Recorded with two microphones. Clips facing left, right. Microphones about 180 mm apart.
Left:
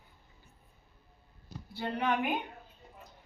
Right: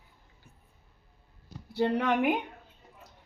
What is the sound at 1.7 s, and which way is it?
Speech, 75° right (ahead or behind).